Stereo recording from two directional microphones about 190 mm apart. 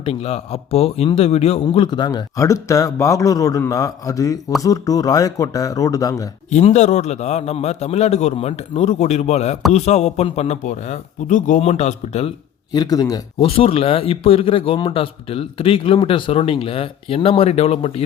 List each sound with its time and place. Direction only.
0.0 s a man's voice: 30° left (ahead or behind)
6.5 s a man's voice: 35° left (ahead or behind)
12.7 s a man's voice: 20° left (ahead or behind)
13.5 s a man's voice: 30° left (ahead or behind)